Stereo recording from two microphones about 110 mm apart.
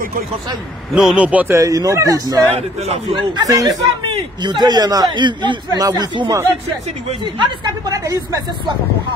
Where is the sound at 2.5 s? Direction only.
75° right (ahead or behind).